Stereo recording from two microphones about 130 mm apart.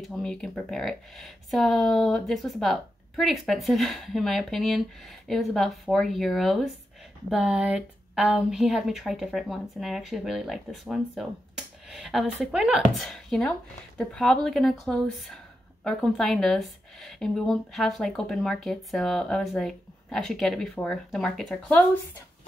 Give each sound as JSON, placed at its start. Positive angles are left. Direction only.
{"t": 0.0, "sound": "speech", "side_deg": 5}